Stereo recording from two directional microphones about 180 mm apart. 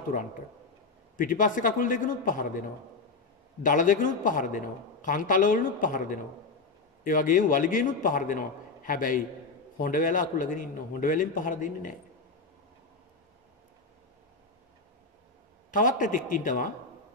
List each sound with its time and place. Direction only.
1.1 s a man's voice: 50° left (ahead or behind)
3.6 s a man's voice: 50° left (ahead or behind)
15.7 s a man's voice: 50° left (ahead or behind)